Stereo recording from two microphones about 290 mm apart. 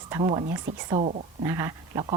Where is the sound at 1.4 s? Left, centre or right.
Centre.